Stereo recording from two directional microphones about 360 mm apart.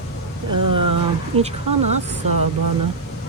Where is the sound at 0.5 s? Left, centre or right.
Right.